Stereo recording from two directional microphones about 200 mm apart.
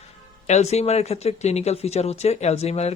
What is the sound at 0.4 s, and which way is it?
Speech, 35° left (ahead or behind).